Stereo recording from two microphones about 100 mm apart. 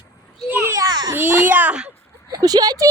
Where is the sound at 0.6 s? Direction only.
35° right (ahead or behind).